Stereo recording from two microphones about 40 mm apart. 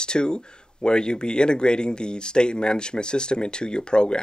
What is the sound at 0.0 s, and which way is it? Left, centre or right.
Speech, left.